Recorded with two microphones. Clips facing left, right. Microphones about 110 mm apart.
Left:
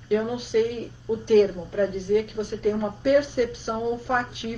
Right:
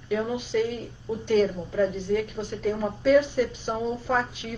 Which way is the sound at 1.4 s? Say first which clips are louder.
Left 2 dB; 15° left (ahead or behind).